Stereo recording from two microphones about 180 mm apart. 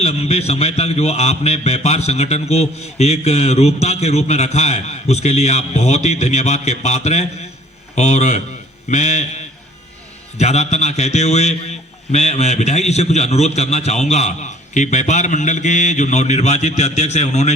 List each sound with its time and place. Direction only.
0.0 s a man's voice: 35° left (ahead or behind)